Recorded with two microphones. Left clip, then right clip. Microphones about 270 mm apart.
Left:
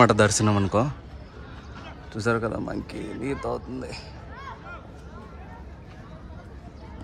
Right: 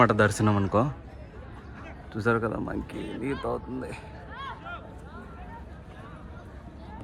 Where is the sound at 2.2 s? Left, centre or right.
Centre.